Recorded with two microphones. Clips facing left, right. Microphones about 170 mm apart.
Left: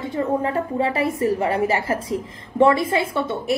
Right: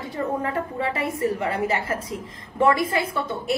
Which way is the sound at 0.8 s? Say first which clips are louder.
Left 3 dB; 30° left (ahead or behind).